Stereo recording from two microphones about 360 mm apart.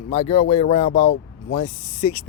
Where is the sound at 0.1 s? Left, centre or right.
Centre.